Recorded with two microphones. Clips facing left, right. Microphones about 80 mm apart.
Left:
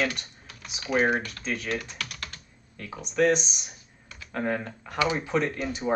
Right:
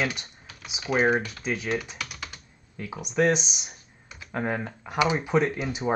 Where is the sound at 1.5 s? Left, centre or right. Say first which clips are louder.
Right 2 dB; centre.